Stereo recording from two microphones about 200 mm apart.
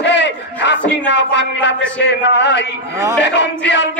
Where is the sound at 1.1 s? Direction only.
60° left (ahead or behind).